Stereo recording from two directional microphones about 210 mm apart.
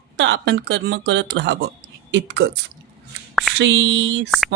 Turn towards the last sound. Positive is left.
turn(degrees=-60)  # may be behind; listen again after turning